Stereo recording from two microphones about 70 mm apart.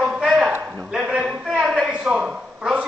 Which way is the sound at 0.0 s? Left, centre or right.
Centre.